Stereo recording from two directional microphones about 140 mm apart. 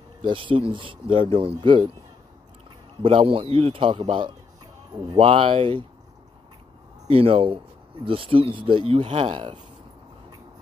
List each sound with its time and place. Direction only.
0.2 s speech: 35° right (ahead or behind)
3.0 s speech: 40° right (ahead or behind)
7.1 s speech: 40° right (ahead or behind)